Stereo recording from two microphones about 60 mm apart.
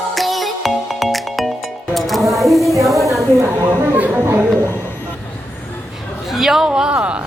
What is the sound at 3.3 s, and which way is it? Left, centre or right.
Speech, right.